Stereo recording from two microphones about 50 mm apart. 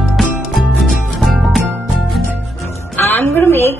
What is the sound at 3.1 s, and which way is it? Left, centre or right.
Music, left.